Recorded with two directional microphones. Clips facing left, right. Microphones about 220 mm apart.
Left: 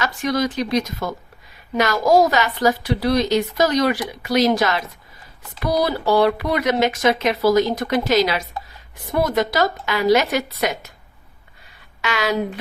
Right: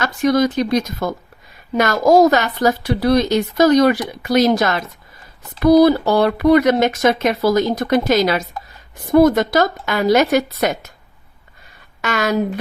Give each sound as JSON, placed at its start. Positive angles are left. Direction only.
{"t": 0.0, "sound": "speech", "side_deg": -45}
{"t": 12.0, "sound": "speech", "side_deg": -45}